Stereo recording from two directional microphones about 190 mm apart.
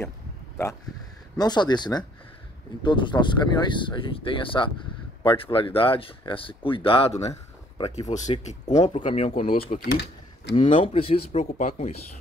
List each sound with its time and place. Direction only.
1.4 s speech: 20° left (ahead or behind)
7.2 s a sound: 30° left (ahead or behind)
8.1 s speech: 40° left (ahead or behind)